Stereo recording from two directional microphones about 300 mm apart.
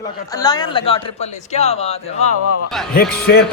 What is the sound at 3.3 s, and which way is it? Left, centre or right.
Speech, left.